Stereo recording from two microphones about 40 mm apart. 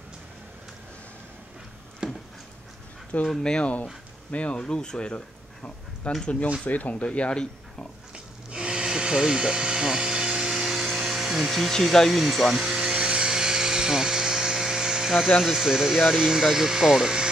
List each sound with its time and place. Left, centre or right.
2.0 s a sound: centre
3.3 s speech: centre
4.3 s speech: left
4.6 s speech: centre
5.1 s a sound: left
6.6 s speech: left
7.1 s speech: left
8.1 s a sound: centre
11.7 s speech: centre
12.1 s speech: centre
12.5 s a sound: centre
15.4 s speech: centre